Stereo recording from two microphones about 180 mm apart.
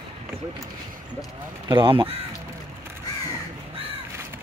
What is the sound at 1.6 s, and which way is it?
Speech, 25° right (ahead or behind).